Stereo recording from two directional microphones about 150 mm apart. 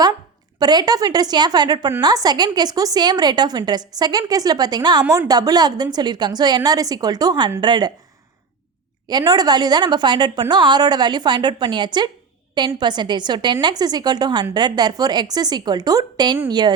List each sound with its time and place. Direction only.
0.6 s a woman's voice: 25° right (ahead or behind)
9.0 s a woman's voice: 25° right (ahead or behind)